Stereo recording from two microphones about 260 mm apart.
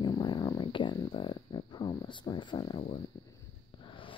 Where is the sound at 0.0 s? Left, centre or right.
Centre.